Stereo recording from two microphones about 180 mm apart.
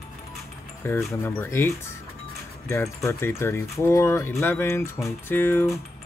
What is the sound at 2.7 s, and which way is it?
Speech, 15° left (ahead or behind).